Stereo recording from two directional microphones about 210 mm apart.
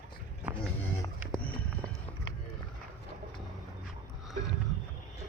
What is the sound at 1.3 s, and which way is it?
Run, 5° left (ahead or behind).